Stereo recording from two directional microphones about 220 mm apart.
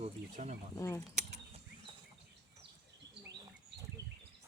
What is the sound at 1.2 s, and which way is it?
Mechanisms, 30° right (ahead or behind).